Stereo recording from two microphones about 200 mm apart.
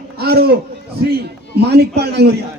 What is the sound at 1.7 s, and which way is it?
Speech, 55° right (ahead or behind).